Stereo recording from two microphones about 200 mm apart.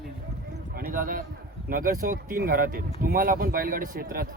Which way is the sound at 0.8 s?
45° right (ahead or behind).